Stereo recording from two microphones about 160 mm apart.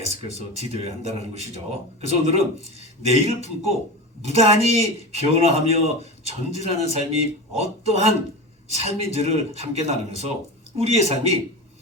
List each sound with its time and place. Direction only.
0.0 s speech: 40° right (ahead or behind)